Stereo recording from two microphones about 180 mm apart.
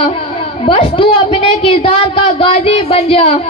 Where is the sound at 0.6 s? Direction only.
35° left (ahead or behind).